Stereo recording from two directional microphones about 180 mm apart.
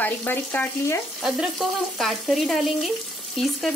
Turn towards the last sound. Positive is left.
turn(degrees=0)  # may be behind; listen again after turning